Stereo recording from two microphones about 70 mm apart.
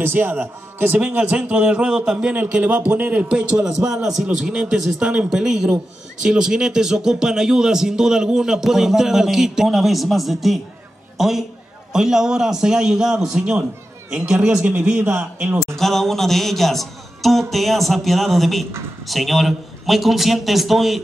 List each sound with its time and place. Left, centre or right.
0.0 s a man's voice: right; by 14.4 s centre
14.4 s a man's voice: right
14.8 s speech: centre
15.0 s a man's voice: right
15.8 s a man's voice: centre